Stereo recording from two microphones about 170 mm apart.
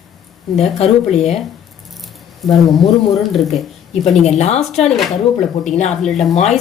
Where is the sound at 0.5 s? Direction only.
Centre (ahead or behind).